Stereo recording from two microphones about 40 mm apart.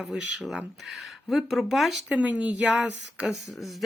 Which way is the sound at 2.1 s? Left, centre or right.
Right.